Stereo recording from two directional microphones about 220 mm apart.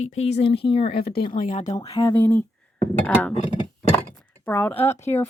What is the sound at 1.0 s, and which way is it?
Speech, 45° left (ahead or behind).